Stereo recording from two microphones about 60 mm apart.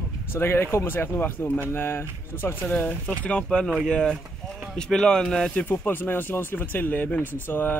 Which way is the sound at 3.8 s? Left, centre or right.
Centre.